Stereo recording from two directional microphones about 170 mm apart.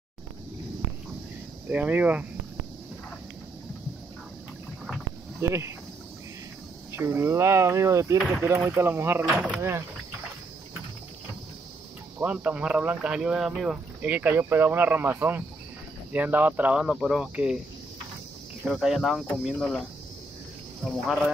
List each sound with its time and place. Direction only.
1.7 s speech: 10° right (ahead or behind)
5.4 s speech: 15° right (ahead or behind)
6.9 s speech: 15° right (ahead or behind)
12.2 s speech: 10° right (ahead or behind)
18.7 s speech: centre (ahead or behind)